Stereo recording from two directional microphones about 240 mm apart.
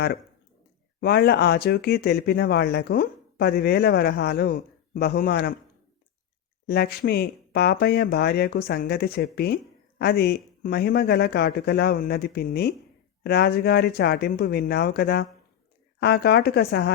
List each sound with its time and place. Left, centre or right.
1.0 s speech: left
6.7 s speech: left